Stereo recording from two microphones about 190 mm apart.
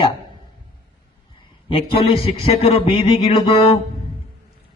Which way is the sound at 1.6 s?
30° left (ahead or behind).